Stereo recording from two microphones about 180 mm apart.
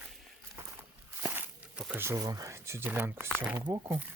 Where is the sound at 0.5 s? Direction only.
10° right (ahead or behind).